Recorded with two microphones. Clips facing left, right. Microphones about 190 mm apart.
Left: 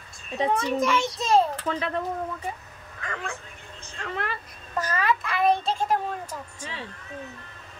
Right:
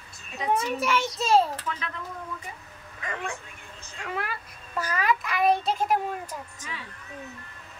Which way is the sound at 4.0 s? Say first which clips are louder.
Left 1 dB; 10° right (ahead or behind).